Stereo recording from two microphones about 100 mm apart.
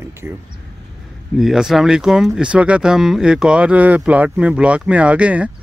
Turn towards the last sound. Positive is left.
turn(degrees=-15)  # may be behind; listen again after turning